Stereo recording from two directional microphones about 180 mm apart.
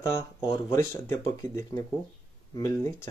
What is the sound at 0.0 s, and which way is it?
Speech, 25° left (ahead or behind).